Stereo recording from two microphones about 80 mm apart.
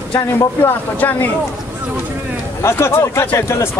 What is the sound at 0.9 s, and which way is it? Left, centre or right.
Speech, left.